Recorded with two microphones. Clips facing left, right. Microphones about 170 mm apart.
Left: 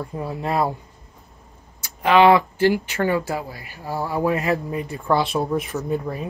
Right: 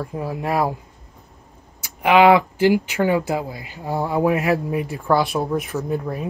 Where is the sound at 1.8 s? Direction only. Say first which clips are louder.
Right 1 dB; 15° right (ahead or behind).